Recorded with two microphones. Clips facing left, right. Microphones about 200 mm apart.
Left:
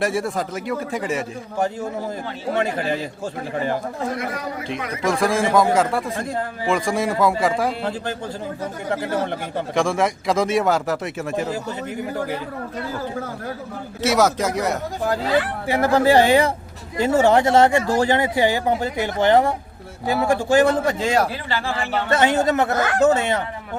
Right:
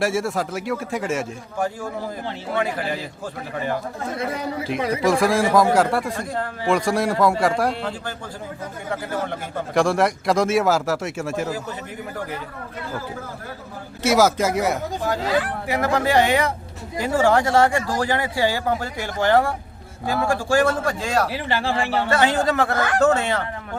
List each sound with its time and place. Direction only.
0.0 s speech: centre (ahead or behind)
1.5 s speech: 20° left (ahead or behind)
4.1 s speech: 25° right (ahead or behind)
5.0 s speech: centre (ahead or behind)
9.7 s speech: centre (ahead or behind)
14.0 s speech: centre (ahead or behind)
15.6 s speech: 30° left (ahead or behind)